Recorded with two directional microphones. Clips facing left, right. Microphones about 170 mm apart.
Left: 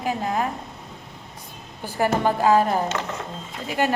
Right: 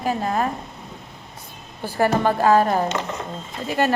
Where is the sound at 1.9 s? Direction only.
15° left (ahead or behind).